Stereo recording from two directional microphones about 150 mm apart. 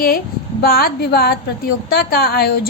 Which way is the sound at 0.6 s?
80° left.